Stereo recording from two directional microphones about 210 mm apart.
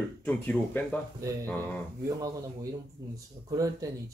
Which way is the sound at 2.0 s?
15° right (ahead or behind).